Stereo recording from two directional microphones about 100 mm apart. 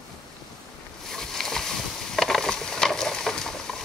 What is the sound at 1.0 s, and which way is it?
Boat, 5° left (ahead or behind).